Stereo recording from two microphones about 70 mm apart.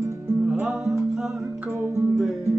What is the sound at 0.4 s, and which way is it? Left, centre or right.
Music, centre.